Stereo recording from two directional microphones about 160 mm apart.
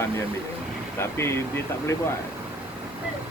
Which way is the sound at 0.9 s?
15° left (ahead or behind).